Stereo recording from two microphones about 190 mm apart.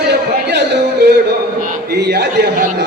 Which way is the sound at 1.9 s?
60° right (ahead or behind).